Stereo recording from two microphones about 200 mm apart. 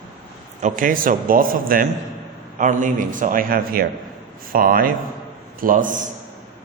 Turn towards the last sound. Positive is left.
turn(degrees=-40)  # may be behind; listen again after turning